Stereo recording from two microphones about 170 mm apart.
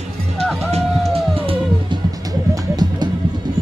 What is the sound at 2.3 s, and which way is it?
Music, 25° right (ahead or behind).